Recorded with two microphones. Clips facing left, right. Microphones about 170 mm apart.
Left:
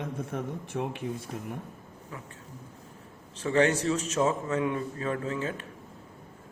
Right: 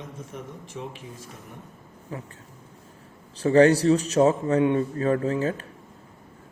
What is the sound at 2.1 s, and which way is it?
Speech, 35° right (ahead or behind).